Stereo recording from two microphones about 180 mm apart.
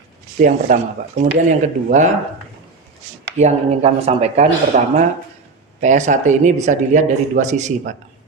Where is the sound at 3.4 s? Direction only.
35° right (ahead or behind).